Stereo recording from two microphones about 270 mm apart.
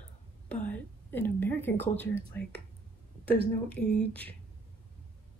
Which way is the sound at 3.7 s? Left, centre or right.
Centre.